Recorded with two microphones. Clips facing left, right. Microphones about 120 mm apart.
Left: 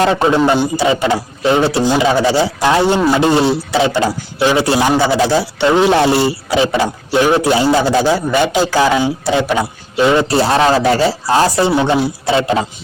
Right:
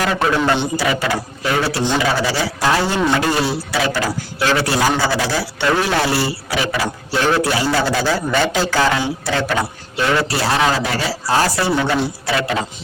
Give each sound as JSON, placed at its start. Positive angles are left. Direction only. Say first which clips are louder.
{"t": 0.0, "sound": "a man's voice", "louder": "left 5 dB", "side_deg": 25}